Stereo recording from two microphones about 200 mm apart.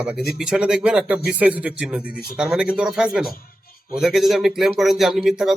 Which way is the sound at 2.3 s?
5° right (ahead or behind).